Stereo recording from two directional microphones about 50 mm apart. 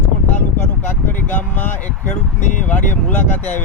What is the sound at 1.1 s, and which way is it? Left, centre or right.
Speech, left.